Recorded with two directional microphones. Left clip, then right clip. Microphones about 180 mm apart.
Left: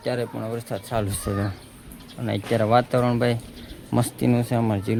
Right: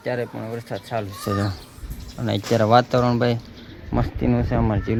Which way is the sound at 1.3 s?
15° right (ahead or behind).